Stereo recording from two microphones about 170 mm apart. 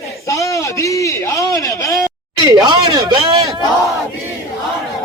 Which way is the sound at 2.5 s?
25° right (ahead or behind).